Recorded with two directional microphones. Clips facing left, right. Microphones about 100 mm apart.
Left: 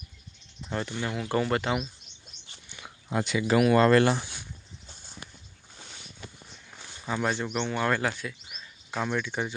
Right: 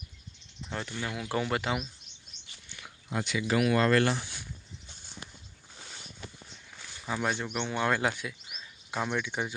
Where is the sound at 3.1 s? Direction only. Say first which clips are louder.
Left 4 dB; 45° left (ahead or behind); by 4.2 s 25° left (ahead or behind).